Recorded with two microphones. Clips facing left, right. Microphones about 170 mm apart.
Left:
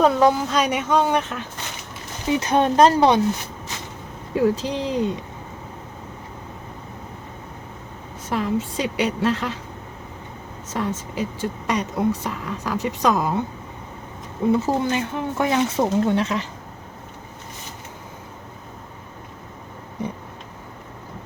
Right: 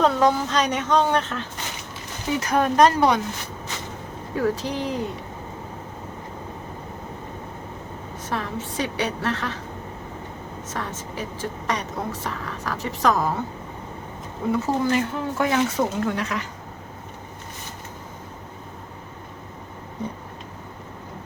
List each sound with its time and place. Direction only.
0.0 s a woman's voice: 10° left (ahead or behind)
2.3 s speech: 25° left (ahead or behind)
4.4 s speech: 25° left (ahead or behind)
8.3 s a woman's voice: 20° left (ahead or behind)
10.8 s a woman's voice: 15° left (ahead or behind)
14.5 s speech: 25° left (ahead or behind)